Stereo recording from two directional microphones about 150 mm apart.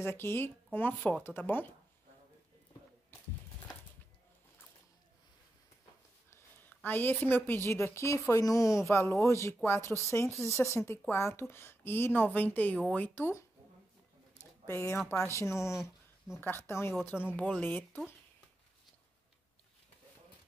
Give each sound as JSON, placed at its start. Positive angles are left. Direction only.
{"t": 0.0, "sound": "speech", "side_deg": 15}
{"t": 6.3, "sound": "a woman's voice", "side_deg": 10}
{"t": 14.7, "sound": "speech", "side_deg": 15}
{"t": 15.7, "sound": "a sound", "side_deg": -5}
{"t": 16.3, "sound": "speech", "side_deg": 15}